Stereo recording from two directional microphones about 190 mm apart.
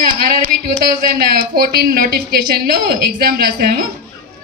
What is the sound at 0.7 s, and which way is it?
Speech, 50° right (ahead or behind).